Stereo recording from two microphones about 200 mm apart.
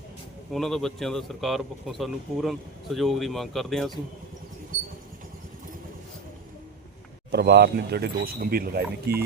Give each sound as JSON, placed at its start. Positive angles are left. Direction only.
{"t": 0.5, "sound": "speech", "side_deg": 0}
{"t": 7.3, "sound": "speech", "side_deg": -55}